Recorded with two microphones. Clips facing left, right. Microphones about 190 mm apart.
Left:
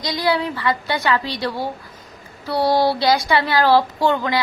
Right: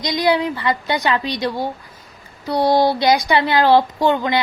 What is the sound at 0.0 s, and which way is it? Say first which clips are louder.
A woman's voice: right 3 dB; 15° right (ahead or behind).